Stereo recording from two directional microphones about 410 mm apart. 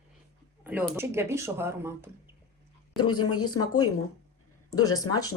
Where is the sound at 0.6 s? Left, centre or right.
Centre.